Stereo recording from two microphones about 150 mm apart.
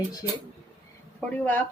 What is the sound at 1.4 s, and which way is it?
Speech, 10° left (ahead or behind).